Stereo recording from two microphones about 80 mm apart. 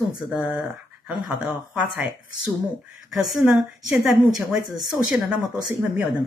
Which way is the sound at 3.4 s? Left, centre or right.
Centre.